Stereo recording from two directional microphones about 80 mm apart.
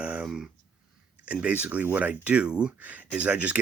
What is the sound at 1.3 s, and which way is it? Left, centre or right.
Speech, centre.